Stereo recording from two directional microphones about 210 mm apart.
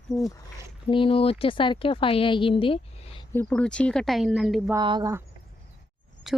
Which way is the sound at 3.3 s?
5° left (ahead or behind).